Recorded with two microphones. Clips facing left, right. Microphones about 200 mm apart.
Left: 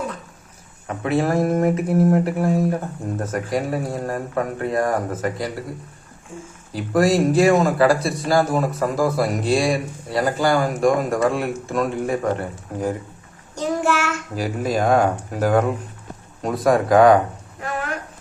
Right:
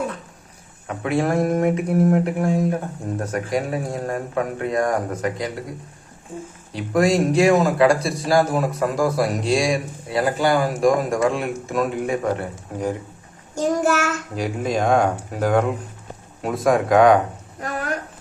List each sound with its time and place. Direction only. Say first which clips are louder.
0.9 s speech: left 1 dB; centre (ahead or behind)
6.7 s speech: left 1 dB; centre (ahead or behind)
13.6 s child singing: right 2 dB; 40° right (ahead or behind)
14.3 s speech: left 1 dB; 5° left (ahead or behind)
17.6 s a sound: even; 40° right (ahead or behind)